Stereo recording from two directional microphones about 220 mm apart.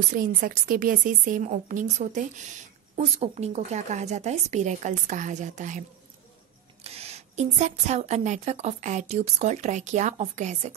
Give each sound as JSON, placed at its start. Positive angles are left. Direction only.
{"t": 0.1, "sound": "a woman's voice", "side_deg": -40}